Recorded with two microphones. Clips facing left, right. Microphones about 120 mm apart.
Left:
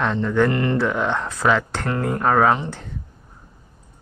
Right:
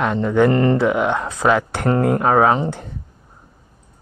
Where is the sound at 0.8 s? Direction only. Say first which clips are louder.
Right 4 dB; 10° right (ahead or behind).